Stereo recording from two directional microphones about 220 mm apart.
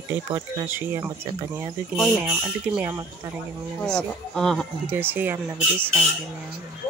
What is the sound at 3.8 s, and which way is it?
Speech, 5° left (ahead or behind).